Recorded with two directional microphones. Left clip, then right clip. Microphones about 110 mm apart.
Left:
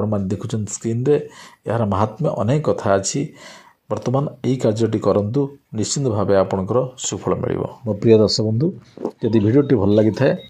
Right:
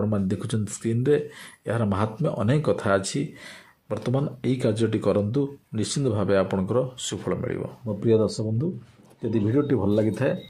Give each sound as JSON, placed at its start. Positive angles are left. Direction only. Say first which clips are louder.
{"t": 0.0, "sound": "speech", "louder": "left 4 dB", "side_deg": 5}
{"t": 7.4, "sound": "speech", "louder": "left 8 dB", "side_deg": 30}